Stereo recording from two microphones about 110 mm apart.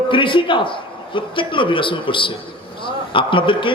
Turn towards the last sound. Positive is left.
turn(degrees=50)  # may be behind; listen again after turning